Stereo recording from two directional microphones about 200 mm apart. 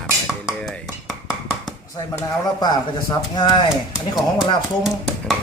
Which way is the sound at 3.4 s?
20° left (ahead or behind).